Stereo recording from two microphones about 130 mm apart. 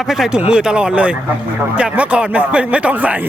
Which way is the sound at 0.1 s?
5° right (ahead or behind).